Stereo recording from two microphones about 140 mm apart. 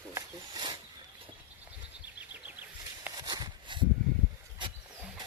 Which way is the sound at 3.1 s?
30° right (ahead or behind).